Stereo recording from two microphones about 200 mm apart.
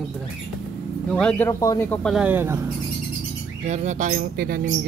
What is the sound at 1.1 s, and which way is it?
Speech, 5° left (ahead or behind).